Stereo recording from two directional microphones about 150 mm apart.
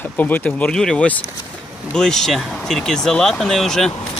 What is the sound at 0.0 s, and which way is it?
Speech, 10° left (ahead or behind).